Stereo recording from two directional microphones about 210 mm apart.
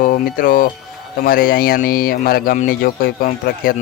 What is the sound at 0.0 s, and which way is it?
Speech, 40° left (ahead or behind).